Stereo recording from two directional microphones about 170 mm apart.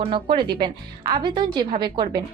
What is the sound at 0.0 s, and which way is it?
A woman's voice, 35° right (ahead or behind).